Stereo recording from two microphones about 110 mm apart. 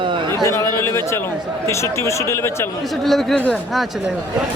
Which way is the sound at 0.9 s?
20° left (ahead or behind).